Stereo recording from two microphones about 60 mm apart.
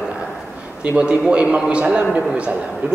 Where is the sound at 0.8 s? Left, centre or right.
Centre.